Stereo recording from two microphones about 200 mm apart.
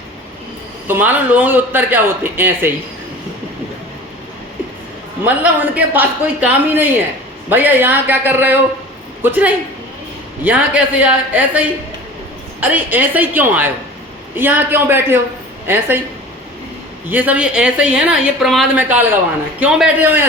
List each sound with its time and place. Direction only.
0.9 s speech: 10° right (ahead or behind)
5.2 s speech: 10° right (ahead or behind)
17.1 s a woman's voice: 10° right (ahead or behind)